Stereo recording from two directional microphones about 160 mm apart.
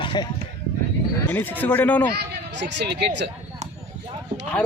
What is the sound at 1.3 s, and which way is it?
Speech, 10° left (ahead or behind).